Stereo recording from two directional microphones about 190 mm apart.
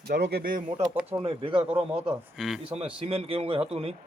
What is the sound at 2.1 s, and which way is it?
Speech, 5° right (ahead or behind).